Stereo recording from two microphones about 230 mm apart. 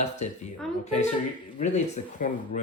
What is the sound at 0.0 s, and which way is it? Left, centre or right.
Speech, left.